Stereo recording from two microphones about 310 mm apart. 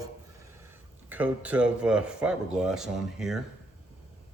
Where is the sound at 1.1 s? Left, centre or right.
Centre.